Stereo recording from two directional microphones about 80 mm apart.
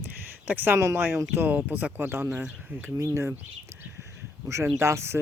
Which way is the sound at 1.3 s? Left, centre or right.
Right.